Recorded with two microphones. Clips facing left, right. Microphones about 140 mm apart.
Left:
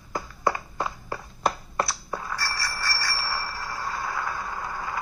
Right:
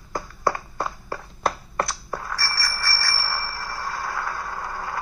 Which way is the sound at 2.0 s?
15° left (ahead or behind).